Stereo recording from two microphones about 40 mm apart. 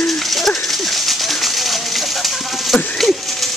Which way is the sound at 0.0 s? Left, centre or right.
Centre.